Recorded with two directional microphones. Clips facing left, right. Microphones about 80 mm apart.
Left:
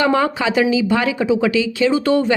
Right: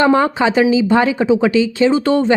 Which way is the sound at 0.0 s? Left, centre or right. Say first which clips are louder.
Right 4 dB; right.